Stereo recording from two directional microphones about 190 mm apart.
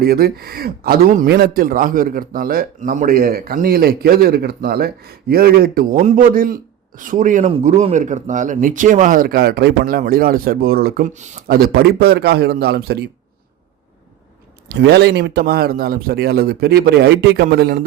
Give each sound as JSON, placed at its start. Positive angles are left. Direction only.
{"t": 0.0, "sound": "a man's voice", "side_deg": -55}
{"t": 14.7, "sound": "a man's voice", "side_deg": -60}